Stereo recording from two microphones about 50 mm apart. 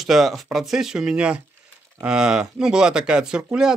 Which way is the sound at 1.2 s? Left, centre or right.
Right.